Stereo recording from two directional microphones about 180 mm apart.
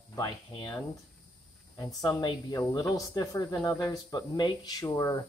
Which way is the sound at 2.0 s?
25° left (ahead or behind).